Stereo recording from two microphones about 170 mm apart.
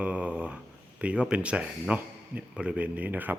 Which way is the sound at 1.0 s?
5° right (ahead or behind).